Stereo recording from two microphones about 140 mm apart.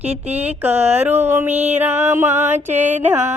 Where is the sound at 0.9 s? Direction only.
15° right (ahead or behind).